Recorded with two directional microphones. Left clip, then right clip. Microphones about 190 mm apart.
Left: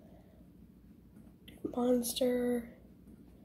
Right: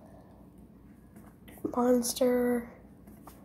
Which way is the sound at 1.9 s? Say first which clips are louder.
Right 4 dB; 45° right (ahead or behind).